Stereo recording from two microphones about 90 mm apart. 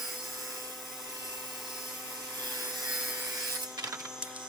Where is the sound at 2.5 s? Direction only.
45° right (ahead or behind).